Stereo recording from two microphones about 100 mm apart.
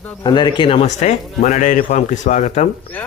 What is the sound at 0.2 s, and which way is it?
Speech, 50° left (ahead or behind).